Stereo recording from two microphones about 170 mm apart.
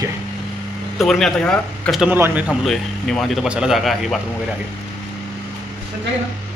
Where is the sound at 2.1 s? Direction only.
10° right (ahead or behind).